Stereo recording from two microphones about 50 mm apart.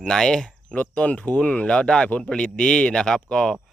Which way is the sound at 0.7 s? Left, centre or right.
Left.